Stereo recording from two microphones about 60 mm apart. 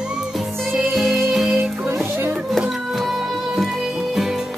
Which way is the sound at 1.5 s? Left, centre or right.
Right.